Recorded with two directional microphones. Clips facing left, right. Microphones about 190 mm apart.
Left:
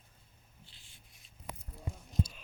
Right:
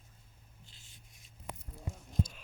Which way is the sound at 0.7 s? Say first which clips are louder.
Right 2 dB; 45° right (ahead or behind).